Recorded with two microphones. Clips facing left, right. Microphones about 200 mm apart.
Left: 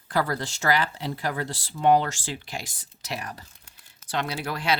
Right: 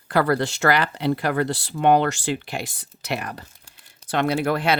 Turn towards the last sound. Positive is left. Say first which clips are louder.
# right 7 dB
turn(degrees=-55)  # may be behind; listen again after turning